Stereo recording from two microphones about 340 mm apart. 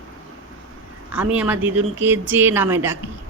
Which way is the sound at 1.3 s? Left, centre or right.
Centre.